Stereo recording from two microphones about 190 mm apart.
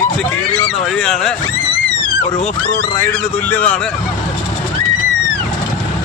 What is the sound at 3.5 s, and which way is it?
Speech, 10° left (ahead or behind).